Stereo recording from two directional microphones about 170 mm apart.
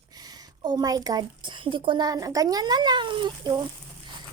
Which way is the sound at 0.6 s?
20° right (ahead or behind).